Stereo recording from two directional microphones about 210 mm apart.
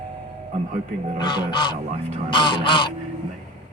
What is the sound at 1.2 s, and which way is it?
Music, 20° left (ahead or behind).